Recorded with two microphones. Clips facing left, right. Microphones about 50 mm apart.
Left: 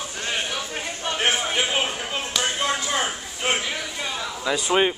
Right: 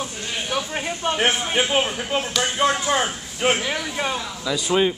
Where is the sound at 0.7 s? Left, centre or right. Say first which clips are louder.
Right 4 dB; centre.